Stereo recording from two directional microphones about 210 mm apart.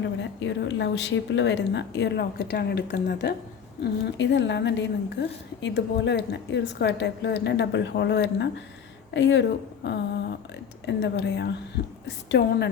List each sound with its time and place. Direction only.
0.0 s a woman's voice: 60° left (ahead or behind)